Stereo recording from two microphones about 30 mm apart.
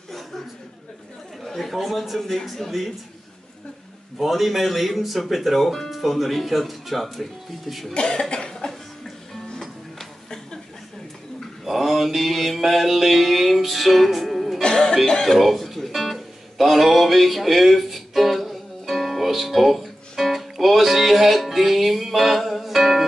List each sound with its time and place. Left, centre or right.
1.4 s chatter: centre
1.7 s speech: centre
4.2 s speech: centre
7.9 s cough: left
11.6 s mantra: centre
14.7 s music: left
15.2 s music: centre